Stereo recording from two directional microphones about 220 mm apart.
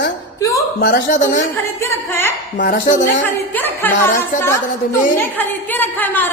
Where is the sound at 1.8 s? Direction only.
10° left (ahead or behind).